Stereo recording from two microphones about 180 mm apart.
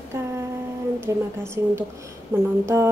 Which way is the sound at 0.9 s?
15° right (ahead or behind).